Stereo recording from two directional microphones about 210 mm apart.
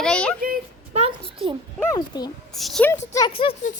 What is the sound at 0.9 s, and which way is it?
Speech, 25° right (ahead or behind).